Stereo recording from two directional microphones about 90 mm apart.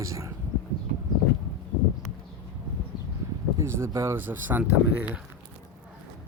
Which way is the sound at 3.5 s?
30° right (ahead or behind).